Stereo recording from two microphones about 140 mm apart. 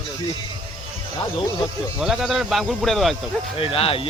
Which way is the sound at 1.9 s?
5° right (ahead or behind).